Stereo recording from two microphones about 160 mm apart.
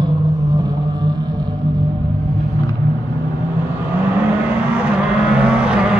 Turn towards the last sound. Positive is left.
turn(degrees=-5)  # may be behind; listen again after turning